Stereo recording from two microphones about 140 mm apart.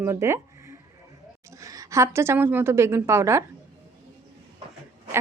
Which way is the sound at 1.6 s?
25° right (ahead or behind).